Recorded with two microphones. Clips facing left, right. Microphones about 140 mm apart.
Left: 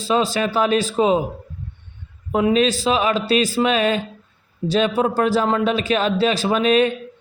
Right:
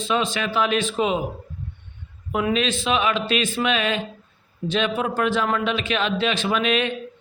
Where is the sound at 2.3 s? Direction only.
35° left (ahead or behind).